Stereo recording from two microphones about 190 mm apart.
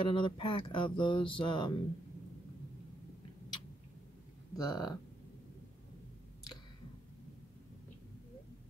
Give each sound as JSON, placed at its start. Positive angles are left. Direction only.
{"t": 0.0, "sound": "speech", "side_deg": 25}
{"t": 4.6, "sound": "speech", "side_deg": 20}